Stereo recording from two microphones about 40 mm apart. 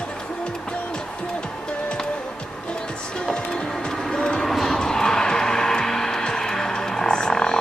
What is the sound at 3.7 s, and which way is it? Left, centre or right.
Music, centre.